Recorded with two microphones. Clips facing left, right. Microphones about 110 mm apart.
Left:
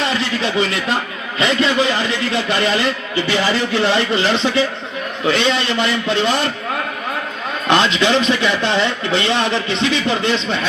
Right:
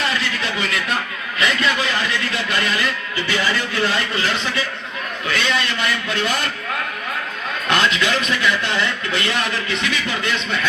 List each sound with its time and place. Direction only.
0.0 s a sound: 25° left (ahead or behind)
1.4 s a man's voice: 25° left (ahead or behind)
7.7 s a man's voice: 25° left (ahead or behind)